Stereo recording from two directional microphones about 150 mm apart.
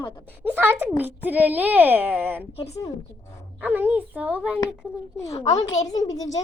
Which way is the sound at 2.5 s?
45° left (ahead or behind).